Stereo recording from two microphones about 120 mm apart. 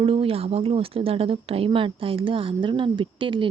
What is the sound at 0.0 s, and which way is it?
A woman's voice, 50° right (ahead or behind).